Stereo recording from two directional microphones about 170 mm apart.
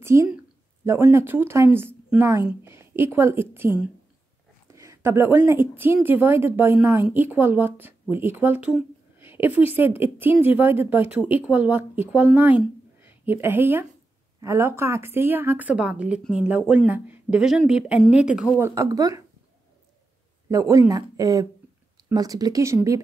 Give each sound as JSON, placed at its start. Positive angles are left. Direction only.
{"t": 0.0, "sound": "a woman's voice", "side_deg": -15}
{"t": 18.8, "sound": "speech", "side_deg": -20}
{"t": 20.4, "sound": "speech", "side_deg": -20}